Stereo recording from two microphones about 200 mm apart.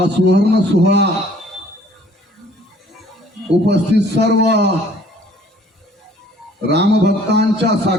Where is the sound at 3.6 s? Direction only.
55° right (ahead or behind).